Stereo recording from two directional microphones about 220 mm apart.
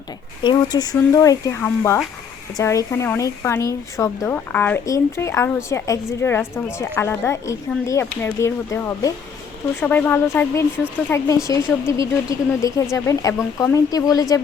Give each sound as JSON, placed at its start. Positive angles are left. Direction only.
{"t": 0.4, "sound": "speech", "side_deg": 15}